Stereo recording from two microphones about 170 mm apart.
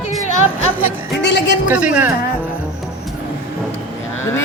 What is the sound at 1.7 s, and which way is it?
Music, 5° right (ahead or behind).